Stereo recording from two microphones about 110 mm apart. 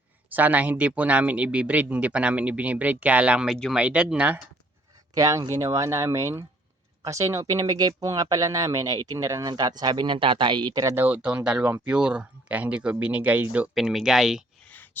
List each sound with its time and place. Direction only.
0.3 s speech: 15° right (ahead or behind)
5.1 s speech: 35° right (ahead or behind)
10.9 s speech: 15° right (ahead or behind)
13.7 s speech: centre (ahead or behind)
14.6 s a sound: 15° left (ahead or behind)